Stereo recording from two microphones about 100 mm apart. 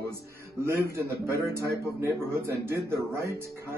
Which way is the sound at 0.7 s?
25° right (ahead or behind).